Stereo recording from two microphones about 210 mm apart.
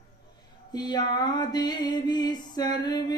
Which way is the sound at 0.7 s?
20° left (ahead or behind).